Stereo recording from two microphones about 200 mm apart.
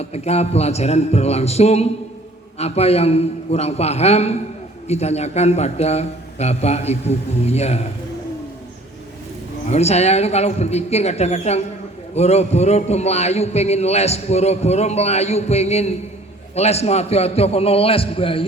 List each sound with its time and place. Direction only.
0.0 s a man's voice: 30° left (ahead or behind)
9.6 s a man's voice: 30° left (ahead or behind)